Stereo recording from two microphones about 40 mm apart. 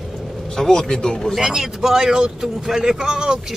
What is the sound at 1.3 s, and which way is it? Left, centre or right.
Speech, centre.